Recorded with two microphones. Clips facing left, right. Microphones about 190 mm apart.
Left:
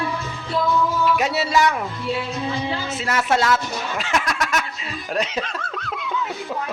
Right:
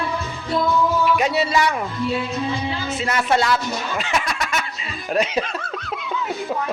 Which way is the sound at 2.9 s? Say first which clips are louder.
Right 2 dB; centre (ahead or behind).